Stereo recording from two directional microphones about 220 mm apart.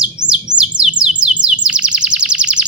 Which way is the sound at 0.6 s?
5° right (ahead or behind).